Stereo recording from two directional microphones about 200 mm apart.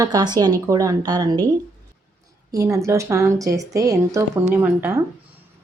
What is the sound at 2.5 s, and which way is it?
Speech, 15° right (ahead or behind).